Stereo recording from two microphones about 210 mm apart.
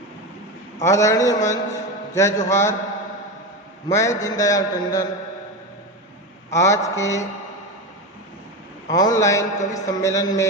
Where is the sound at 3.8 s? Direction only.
15° left (ahead or behind).